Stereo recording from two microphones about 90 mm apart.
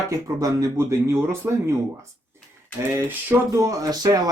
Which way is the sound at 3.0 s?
20° right (ahead or behind).